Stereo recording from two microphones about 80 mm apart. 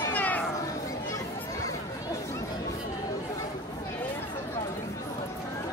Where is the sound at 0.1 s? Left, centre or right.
Left.